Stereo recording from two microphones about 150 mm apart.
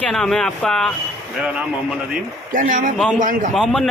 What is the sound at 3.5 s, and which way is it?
Speech, centre (ahead or behind).